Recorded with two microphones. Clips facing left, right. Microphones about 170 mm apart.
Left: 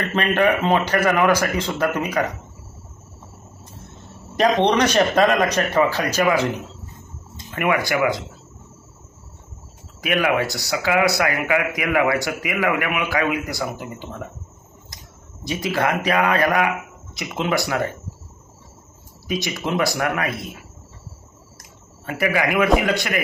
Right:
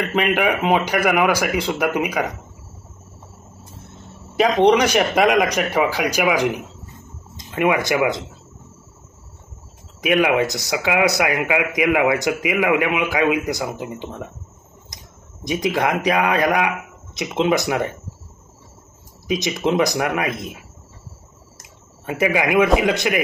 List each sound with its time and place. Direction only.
0.1 s speech: 10° right (ahead or behind)
4.4 s speech: 10° right (ahead or behind)
10.0 s speech: 20° right (ahead or behind)
15.4 s speech: 15° right (ahead or behind)
19.2 s speech: 20° right (ahead or behind)
21.5 s a man's voice: 20° right (ahead or behind)